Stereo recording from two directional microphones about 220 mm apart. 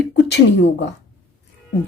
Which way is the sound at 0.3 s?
50° left (ahead or behind).